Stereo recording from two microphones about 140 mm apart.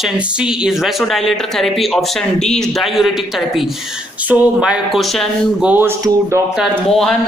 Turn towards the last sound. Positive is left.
turn(degrees=0)  # may be behind; listen again after turning